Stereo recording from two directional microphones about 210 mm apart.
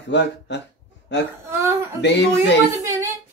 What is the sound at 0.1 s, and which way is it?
Speech, 55° left (ahead or behind).